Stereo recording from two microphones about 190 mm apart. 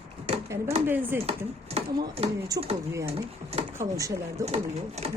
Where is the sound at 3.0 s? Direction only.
30° right (ahead or behind).